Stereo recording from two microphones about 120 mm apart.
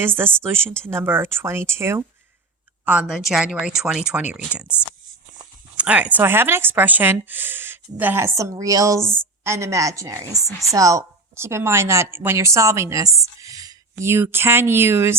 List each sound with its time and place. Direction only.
0.0 s a woman's voice: 20° right (ahead or behind)
2.8 s a woman's voice: 10° right (ahead or behind)